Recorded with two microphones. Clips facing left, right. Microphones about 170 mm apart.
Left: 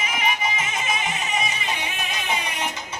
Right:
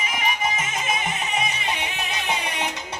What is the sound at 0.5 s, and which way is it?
Music, 50° right (ahead or behind).